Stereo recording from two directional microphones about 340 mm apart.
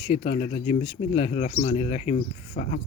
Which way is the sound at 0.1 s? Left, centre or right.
Centre.